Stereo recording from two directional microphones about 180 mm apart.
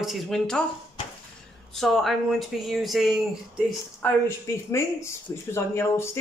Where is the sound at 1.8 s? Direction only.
Centre (ahead or behind).